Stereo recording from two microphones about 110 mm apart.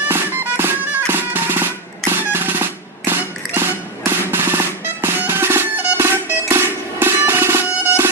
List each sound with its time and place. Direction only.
0.1 s music: 20° right (ahead or behind)